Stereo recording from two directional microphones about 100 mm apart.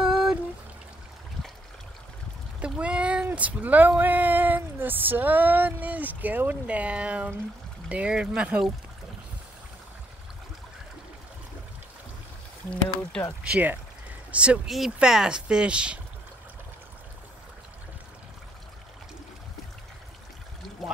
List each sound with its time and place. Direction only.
0.0 s pour: 5° right (ahead or behind)
2.6 s speech: 10° right (ahead or behind)
13.4 s speech: 15° right (ahead or behind)
20.8 s pour: centre (ahead or behind)